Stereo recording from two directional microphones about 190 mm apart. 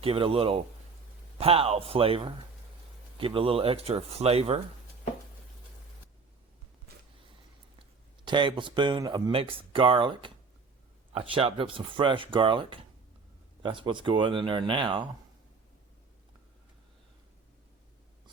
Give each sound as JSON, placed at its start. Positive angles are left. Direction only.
{"t": 0.0, "sound": "speech", "side_deg": -30}
{"t": 8.2, "sound": "speech", "side_deg": -25}